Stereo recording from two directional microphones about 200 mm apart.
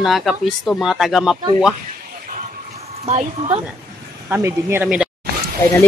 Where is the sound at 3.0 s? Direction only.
30° right (ahead or behind).